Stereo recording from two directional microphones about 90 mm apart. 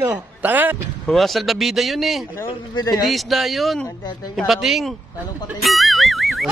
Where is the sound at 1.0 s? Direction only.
Centre (ahead or behind).